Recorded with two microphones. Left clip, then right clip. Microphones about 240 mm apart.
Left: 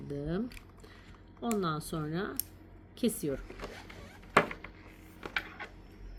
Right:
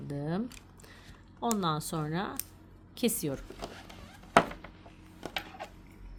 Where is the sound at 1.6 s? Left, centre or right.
Right.